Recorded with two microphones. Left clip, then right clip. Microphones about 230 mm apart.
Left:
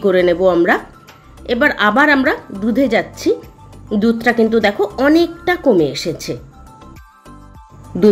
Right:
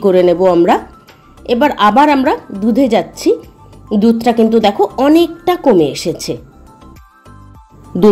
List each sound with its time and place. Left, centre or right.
0.0 s a woman's voice: centre